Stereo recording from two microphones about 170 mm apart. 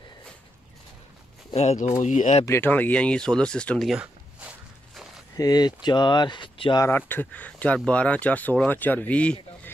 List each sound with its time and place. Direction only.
1.5 s speech: 40° left (ahead or behind)
2.4 s speech: 15° left (ahead or behind); by 4.5 s 5° right (ahead or behind)
5.4 s speech: 25° left (ahead or behind)
6.9 s speech: 10° left (ahead or behind)